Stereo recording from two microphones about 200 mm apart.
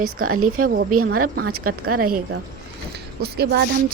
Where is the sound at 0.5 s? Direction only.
45° right (ahead or behind).